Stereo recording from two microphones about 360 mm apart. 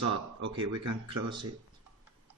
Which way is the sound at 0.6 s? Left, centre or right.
Right.